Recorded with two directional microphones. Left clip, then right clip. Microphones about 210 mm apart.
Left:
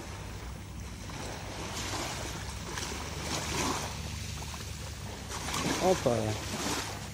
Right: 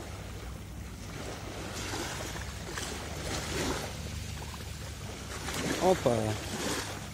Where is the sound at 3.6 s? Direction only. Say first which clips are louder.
Left 1 dB; 35° left (ahead or behind).